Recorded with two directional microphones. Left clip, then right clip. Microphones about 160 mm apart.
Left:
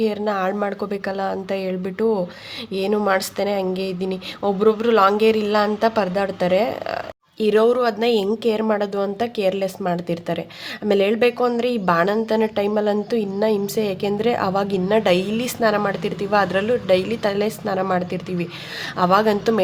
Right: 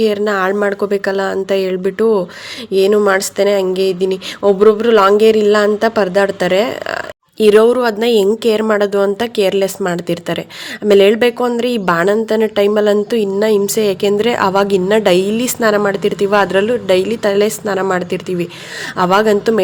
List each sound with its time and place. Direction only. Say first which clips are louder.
0.0 s speech: right 7 dB; 25° right (ahead or behind)
7.3 s a woman's voice: right 7 dB; 35° right (ahead or behind)